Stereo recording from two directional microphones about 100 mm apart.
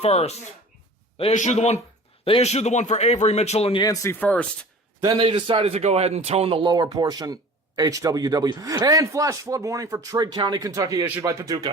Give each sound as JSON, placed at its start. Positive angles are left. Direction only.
{"t": 0.0, "sound": "a man's voice", "side_deg": 90}
{"t": 2.2, "sound": "a man's voice", "side_deg": 80}
{"t": 4.1, "sound": "speech", "side_deg": 15}
{"t": 5.0, "sound": "a man's voice", "side_deg": -55}